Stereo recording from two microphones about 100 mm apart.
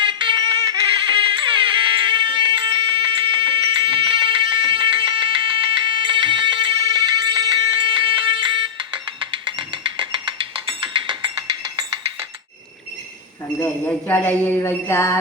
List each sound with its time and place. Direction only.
0.0 s music: 55° right (ahead or behind)
7.9 s music: 60° right (ahead or behind)
14.1 s music: 20° left (ahead or behind)